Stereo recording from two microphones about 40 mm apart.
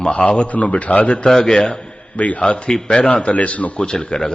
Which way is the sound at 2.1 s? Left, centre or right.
Left.